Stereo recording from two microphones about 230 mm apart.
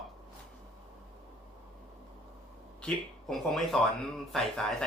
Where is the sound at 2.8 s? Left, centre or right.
Centre.